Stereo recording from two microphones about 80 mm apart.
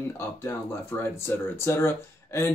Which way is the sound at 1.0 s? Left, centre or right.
Left.